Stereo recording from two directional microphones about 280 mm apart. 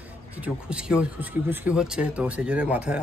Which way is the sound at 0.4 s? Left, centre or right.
Centre.